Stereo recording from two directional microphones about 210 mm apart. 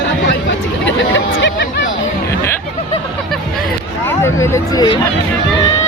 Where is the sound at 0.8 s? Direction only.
60° left (ahead or behind).